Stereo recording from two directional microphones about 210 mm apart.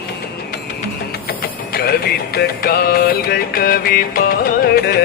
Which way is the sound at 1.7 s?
50° left (ahead or behind).